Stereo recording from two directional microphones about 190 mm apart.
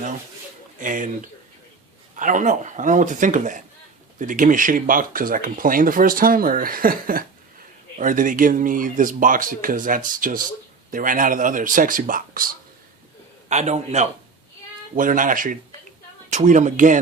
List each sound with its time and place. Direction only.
0.8 s speech: 45° right (ahead or behind)
13.5 s speech: 35° right (ahead or behind)